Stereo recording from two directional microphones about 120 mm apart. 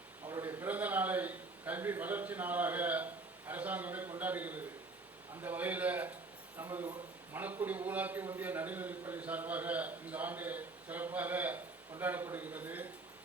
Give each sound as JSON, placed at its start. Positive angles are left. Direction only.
{"t": 0.4, "sound": "a man's voice", "side_deg": -15}
{"t": 6.6, "sound": "a man's voice", "side_deg": -25}